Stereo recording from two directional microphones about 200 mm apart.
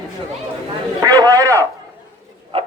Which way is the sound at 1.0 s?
15° right (ahead or behind).